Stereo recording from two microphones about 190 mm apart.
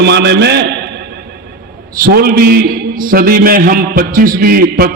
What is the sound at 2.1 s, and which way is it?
A man's voice, 55° right (ahead or behind).